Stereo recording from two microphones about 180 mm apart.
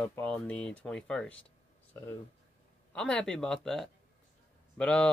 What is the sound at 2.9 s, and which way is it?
Speech, 5° left (ahead or behind).